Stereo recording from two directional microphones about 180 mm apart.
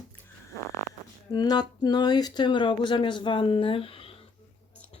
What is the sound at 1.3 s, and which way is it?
Speech, 20° left (ahead or behind).